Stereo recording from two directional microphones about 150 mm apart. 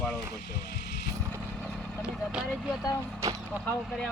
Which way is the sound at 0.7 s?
90° left.